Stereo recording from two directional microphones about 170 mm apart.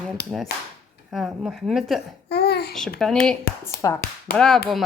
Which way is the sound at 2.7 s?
Centre (ahead or behind).